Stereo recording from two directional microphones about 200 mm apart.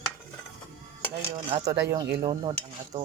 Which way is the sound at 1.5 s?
25° right (ahead or behind).